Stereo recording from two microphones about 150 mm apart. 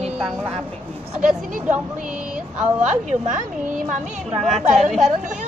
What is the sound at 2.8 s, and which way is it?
Speech, 55° right (ahead or behind).